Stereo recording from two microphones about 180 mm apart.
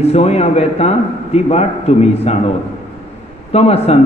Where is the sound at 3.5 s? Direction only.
35° left (ahead or behind).